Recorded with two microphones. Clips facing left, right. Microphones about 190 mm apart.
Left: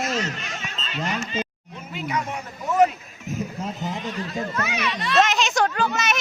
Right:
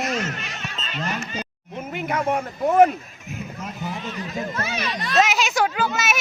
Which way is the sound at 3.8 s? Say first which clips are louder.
Right 1 dB; 20° left (ahead or behind).